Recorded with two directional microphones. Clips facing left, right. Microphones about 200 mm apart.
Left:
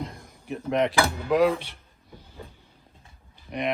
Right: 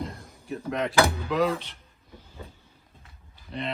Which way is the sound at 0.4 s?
20° left (ahead or behind).